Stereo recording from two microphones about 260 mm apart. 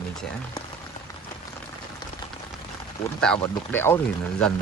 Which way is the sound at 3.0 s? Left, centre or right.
Centre.